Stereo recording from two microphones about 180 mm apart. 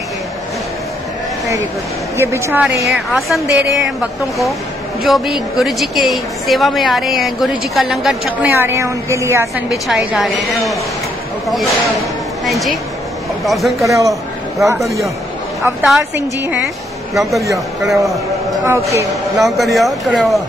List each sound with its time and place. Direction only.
2.1 s a woman's voice: 15° right (ahead or behind)
2.9 s a woman's voice: centre (ahead or behind)
9.7 s a woman's voice: centre (ahead or behind)
11.4 s a woman's voice: centre (ahead or behind)
13.8 s a woman's voice: 15° right (ahead or behind)
15.6 s a woman's voice: 10° right (ahead or behind)
17.2 s a woman's voice: centre (ahead or behind)
18.7 s a woman's voice: 15° right (ahead or behind)
19.3 s a woman's voice: centre (ahead or behind)